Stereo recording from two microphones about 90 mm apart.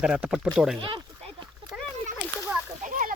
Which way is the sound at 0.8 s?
65° right (ahead or behind).